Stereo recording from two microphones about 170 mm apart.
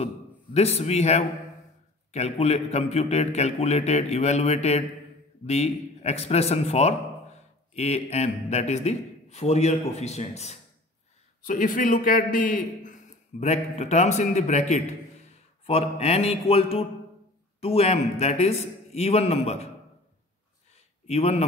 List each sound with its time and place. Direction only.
0.0 s a man's voice: 35° left (ahead or behind)
11.4 s a man's voice: 50° left (ahead or behind)
21.1 s a man's voice: 40° left (ahead or behind)